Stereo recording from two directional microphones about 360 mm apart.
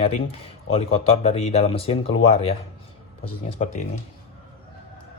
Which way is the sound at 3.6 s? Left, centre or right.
Centre.